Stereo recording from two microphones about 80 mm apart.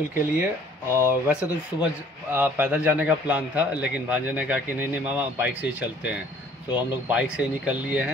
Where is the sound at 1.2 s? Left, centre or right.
Centre.